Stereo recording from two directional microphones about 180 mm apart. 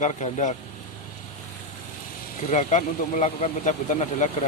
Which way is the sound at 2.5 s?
40° left (ahead or behind).